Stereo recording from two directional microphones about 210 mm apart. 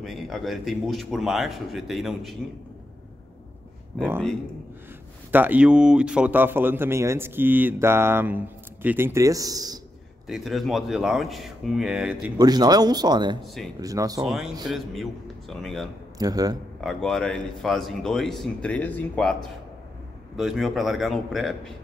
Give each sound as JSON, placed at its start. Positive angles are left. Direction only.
{"t": 0.0, "sound": "speech", "side_deg": 0}
{"t": 5.3, "sound": "speech", "side_deg": -10}
{"t": 10.2, "sound": "speech", "side_deg": 0}
{"t": 12.4, "sound": "speech", "side_deg": -20}
{"t": 14.2, "sound": "speech", "side_deg": 0}
{"t": 16.2, "sound": "speech", "side_deg": -15}
{"t": 16.8, "sound": "speech", "side_deg": 0}
{"t": 20.3, "sound": "speech", "side_deg": 0}